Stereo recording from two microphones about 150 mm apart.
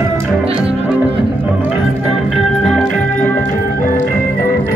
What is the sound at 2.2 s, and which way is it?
Organ, centre (ahead or behind).